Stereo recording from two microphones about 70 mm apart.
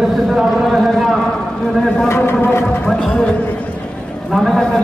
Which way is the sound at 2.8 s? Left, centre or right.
Centre.